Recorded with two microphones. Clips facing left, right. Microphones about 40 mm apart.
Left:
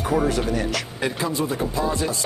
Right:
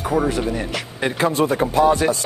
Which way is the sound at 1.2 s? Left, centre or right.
Right.